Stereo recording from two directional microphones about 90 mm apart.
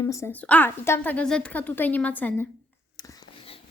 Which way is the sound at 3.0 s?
45° left (ahead or behind).